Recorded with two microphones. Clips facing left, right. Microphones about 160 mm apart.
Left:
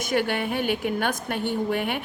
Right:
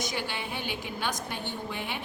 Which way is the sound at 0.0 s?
55° left (ahead or behind).